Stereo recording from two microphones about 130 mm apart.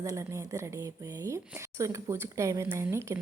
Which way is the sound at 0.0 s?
25° right (ahead or behind).